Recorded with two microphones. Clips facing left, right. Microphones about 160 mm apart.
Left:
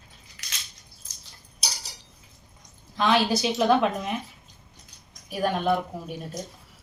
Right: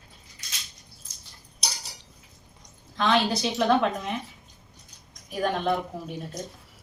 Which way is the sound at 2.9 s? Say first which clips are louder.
Left 1 dB; 5° left (ahead or behind).